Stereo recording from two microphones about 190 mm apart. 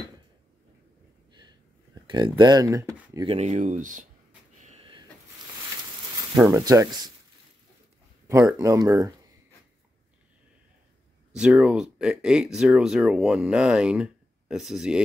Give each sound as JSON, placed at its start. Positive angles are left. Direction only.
{"t": 2.0, "sound": "speech", "side_deg": -25}
{"t": 3.3, "sound": "speech", "side_deg": -35}
{"t": 4.6, "sound": "a sound", "side_deg": -30}
{"t": 6.3, "sound": "speech", "side_deg": -15}
{"t": 8.3, "sound": "speech", "side_deg": -15}
{"t": 11.3, "sound": "speech", "side_deg": -5}